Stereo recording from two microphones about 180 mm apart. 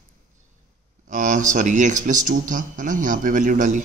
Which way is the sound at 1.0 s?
45° right (ahead or behind).